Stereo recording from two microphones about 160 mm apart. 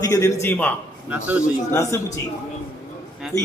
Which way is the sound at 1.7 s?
20° left (ahead or behind).